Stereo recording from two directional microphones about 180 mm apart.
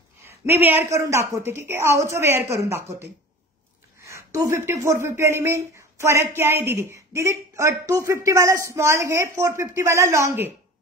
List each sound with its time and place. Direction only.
0.2 s a woman's voice: 10° right (ahead or behind)
4.0 s a sound: 15° right (ahead or behind)
4.8 s a woman's voice: 15° right (ahead or behind)